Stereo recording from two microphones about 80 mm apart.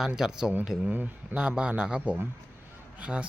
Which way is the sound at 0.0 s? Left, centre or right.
Centre.